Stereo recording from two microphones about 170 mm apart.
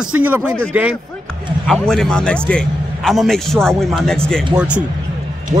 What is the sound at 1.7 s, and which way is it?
A man's voice, 5° left (ahead or behind).